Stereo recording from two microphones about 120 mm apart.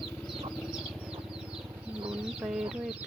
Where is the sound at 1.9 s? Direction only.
10° right (ahead or behind).